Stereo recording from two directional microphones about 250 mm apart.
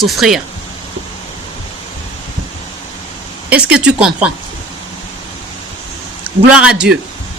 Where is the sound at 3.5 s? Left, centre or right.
Centre.